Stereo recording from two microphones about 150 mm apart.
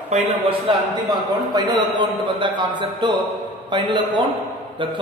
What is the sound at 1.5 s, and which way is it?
Speech, 25° right (ahead or behind).